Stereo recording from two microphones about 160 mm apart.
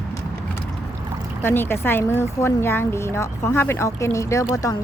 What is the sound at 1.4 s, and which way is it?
A woman's voice, 15° left (ahead or behind).